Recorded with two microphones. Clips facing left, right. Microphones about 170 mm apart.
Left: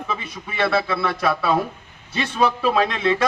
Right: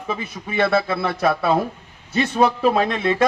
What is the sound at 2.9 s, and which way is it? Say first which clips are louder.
Speech: right 1 dB; 45° right (ahead or behind).